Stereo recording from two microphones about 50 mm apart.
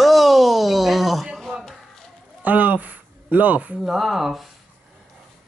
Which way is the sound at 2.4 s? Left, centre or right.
Right.